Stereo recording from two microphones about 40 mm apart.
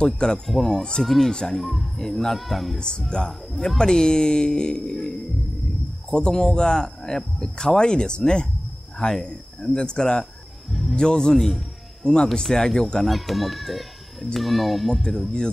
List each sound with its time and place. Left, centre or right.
0.0 s speech: centre
0.5 s a child's voice: centre
3.1 s speech: centre
10.7 s music: centre
11.0 s a man's voice: centre
13.0 s a child's voice: centre